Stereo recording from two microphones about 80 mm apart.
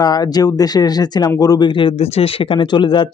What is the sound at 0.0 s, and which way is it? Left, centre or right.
Speech, left.